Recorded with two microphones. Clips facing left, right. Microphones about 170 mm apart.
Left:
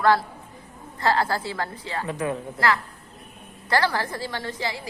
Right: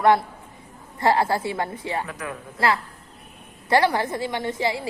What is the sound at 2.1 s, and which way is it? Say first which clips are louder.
Speech: left 6 dB; 25° left (ahead or behind).